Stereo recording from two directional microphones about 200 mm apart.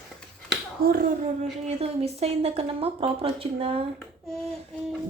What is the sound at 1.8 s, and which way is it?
A woman's voice, 30° right (ahead or behind).